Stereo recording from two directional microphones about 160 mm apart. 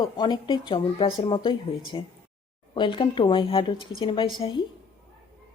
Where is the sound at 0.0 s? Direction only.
25° left (ahead or behind).